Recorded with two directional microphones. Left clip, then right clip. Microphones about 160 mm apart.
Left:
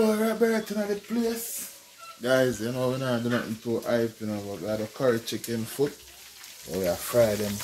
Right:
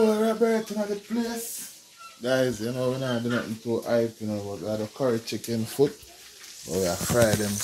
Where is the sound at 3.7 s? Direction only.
10° left (ahead or behind).